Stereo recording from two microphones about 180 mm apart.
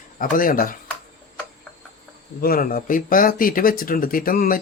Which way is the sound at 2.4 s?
50° left (ahead or behind).